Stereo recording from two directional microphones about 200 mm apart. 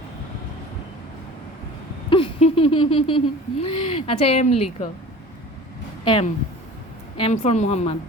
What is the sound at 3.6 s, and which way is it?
Speech, 30° left (ahead or behind).